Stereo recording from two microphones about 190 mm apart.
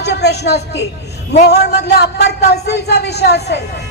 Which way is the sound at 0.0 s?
60° left (ahead or behind).